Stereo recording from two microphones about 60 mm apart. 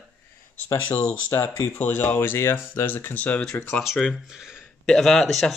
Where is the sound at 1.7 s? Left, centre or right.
Left.